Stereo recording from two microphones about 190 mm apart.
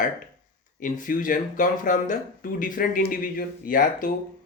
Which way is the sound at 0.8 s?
45° left (ahead or behind).